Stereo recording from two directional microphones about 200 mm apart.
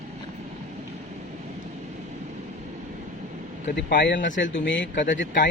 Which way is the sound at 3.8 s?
60° left (ahead or behind).